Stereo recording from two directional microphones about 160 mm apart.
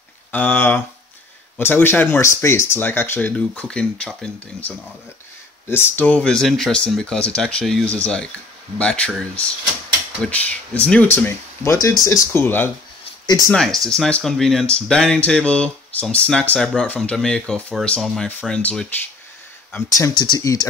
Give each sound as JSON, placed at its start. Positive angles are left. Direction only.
{"t": 0.3, "sound": "speech", "side_deg": 10}
{"t": 19.9, "sound": "speech", "side_deg": 25}